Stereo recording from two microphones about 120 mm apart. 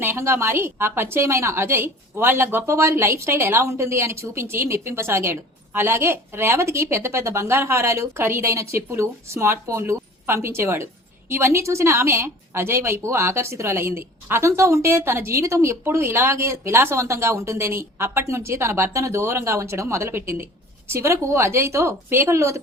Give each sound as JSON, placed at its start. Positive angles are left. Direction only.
{"t": 0.0, "sound": "a woman's voice", "side_deg": -20}